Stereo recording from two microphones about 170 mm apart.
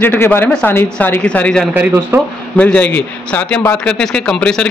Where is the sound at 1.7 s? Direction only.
10° right (ahead or behind).